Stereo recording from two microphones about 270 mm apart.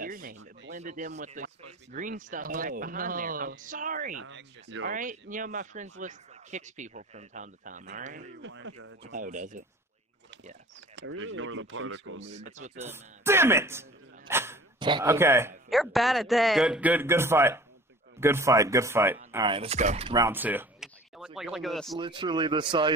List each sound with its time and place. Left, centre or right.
0.0 s speech: right
4.2 s speech: right
8.4 s speech: right
9.1 s speech: right
11.0 s speech: right
12.5 s speech: right
12.9 s speech: centre
21.9 s speech: centre